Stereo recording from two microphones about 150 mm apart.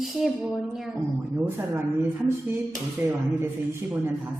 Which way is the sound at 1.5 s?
15° right (ahead or behind).